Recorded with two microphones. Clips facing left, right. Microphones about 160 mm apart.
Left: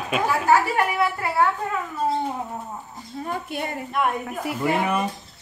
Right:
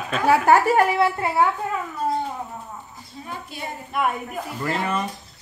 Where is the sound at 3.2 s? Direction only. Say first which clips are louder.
Left 5 dB; 55° left (ahead or behind).